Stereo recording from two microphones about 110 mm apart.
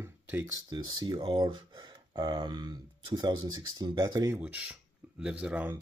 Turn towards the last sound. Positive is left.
turn(degrees=-10)  # may be behind; listen again after turning